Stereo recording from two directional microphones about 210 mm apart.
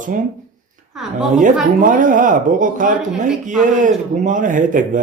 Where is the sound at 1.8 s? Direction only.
40° right (ahead or behind).